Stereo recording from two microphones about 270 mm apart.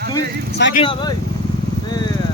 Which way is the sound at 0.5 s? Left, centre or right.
Left.